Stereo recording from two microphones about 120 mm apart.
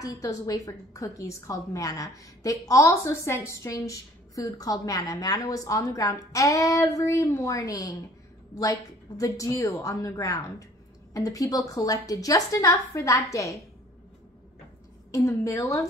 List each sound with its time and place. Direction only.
0.0 s a woman's voice: 30° left (ahead or behind)
15.0 s a woman's voice: 25° left (ahead or behind)